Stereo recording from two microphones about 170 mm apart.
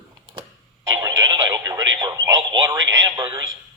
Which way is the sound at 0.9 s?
20° right (ahead or behind).